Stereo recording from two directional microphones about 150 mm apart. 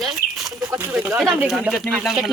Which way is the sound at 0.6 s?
15° right (ahead or behind).